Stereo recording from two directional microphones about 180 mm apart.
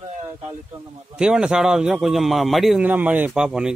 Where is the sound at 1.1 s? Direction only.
5° right (ahead or behind).